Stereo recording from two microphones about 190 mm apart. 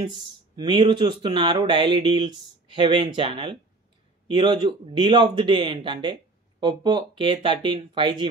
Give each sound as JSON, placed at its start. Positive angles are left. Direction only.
{"t": 0.1, "sound": "speech", "side_deg": -25}